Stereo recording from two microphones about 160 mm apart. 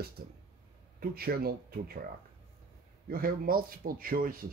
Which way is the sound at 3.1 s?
65° right (ahead or behind).